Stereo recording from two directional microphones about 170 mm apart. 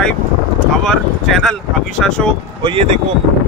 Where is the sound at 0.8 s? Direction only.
5° left (ahead or behind).